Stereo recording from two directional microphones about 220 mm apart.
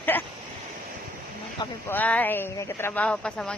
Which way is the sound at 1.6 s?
10° left (ahead or behind).